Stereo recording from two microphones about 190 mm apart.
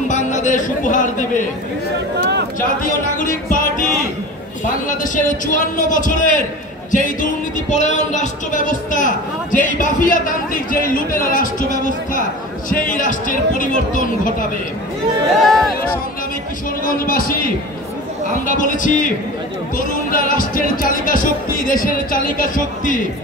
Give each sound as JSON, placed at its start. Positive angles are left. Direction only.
{"t": 0.1, "sound": "speech", "side_deg": 40}
{"t": 2.8, "sound": "music", "side_deg": 45}
{"t": 4.6, "sound": "a sound", "side_deg": 45}
{"t": 5.8, "sound": "a man's voice", "side_deg": 40}
{"t": 6.9, "sound": "music", "side_deg": 40}
{"t": 12.6, "sound": "speech", "side_deg": 45}
{"t": 15.3, "sound": "speech", "side_deg": 0}
{"t": 16.8, "sound": "speech", "side_deg": 50}
{"t": 18.5, "sound": "speech", "side_deg": 45}